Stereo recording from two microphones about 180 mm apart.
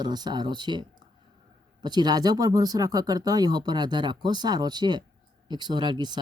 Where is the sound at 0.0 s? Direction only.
25° right (ahead or behind).